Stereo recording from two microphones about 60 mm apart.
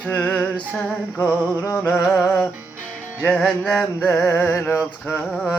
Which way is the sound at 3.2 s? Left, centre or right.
Centre.